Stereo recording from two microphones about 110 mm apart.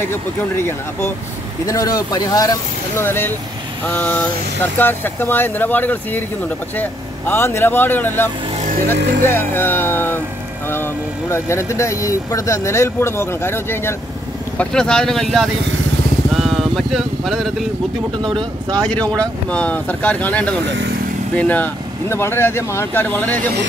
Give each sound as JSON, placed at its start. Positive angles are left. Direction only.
{"t": 0.0, "sound": "speech", "side_deg": 20}
{"t": 3.1, "sound": "speech", "side_deg": 20}
{"t": 14.6, "sound": "speech", "side_deg": 5}
{"t": 16.3, "sound": "vehicle", "side_deg": 0}
{"t": 18.8, "sound": "speech", "side_deg": 10}